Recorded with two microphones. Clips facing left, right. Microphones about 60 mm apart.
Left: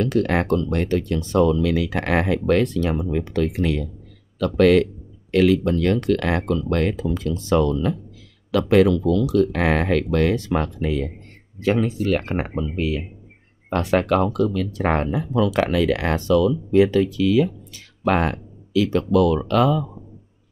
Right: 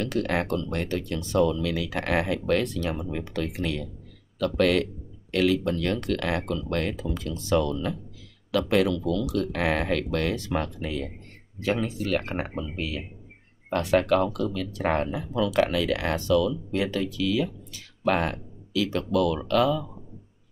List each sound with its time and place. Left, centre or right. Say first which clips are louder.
0.0 s speech: left 6 dB; left